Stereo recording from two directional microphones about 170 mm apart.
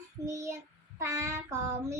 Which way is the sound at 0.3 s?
20° right (ahead or behind).